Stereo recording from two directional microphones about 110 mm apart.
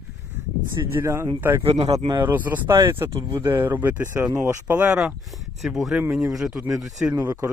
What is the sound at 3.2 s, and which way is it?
Speech, 45° right (ahead or behind).